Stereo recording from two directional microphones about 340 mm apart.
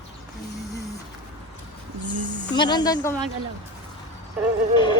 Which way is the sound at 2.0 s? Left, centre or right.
Right.